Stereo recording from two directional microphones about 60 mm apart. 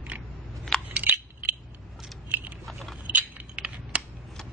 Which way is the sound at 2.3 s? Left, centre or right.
Right.